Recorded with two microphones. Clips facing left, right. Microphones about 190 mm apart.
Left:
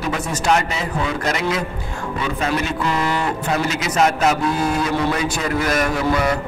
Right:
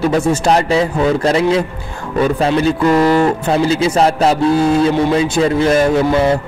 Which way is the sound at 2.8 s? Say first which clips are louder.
Right 12 dB; 40° right (ahead or behind).